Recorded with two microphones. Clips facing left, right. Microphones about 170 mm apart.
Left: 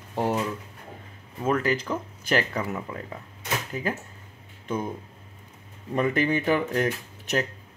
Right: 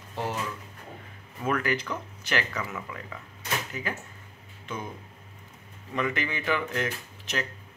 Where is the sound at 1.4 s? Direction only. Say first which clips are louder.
Left 3 dB; 25° left (ahead or behind).